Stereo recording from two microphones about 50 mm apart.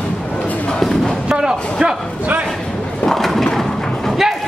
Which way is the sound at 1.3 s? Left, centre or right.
Centre.